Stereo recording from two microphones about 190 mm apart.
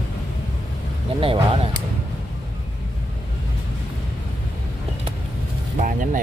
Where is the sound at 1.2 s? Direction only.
30° right (ahead or behind).